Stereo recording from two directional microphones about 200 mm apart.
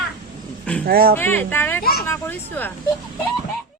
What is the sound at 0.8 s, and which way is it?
Speech, 50° right (ahead or behind).